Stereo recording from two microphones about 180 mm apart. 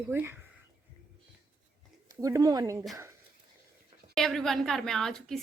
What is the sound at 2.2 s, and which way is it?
Speech, 20° right (ahead or behind).